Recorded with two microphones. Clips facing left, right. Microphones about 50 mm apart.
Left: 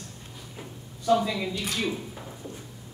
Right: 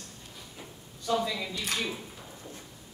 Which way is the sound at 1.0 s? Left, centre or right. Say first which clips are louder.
Left 6 dB; centre.